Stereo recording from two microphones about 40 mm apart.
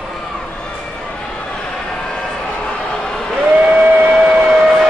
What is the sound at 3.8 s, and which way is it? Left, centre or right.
Vehicle, right.